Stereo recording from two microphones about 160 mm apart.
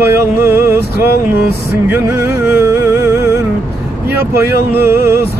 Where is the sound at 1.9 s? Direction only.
15° right (ahead or behind).